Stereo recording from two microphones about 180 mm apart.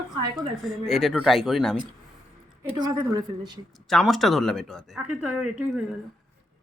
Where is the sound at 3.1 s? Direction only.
25° right (ahead or behind).